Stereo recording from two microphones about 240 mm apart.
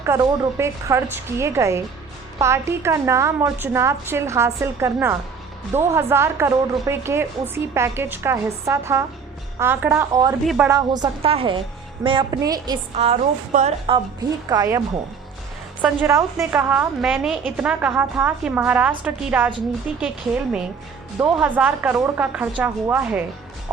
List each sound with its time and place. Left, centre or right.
0.0 s a woman's voice: centre
10.4 s speech: centre
10.7 s a woman's voice: centre
14.5 s a woman's voice: centre